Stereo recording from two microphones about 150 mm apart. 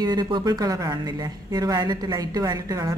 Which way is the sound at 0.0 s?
30° right (ahead or behind).